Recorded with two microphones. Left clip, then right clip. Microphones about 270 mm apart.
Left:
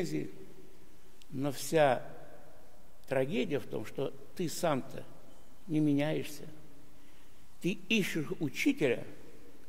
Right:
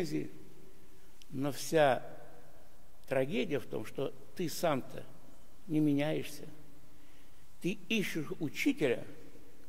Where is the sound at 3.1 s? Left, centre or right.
Centre.